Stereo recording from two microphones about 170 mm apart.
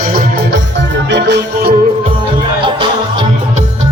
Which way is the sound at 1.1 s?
75° right (ahead or behind).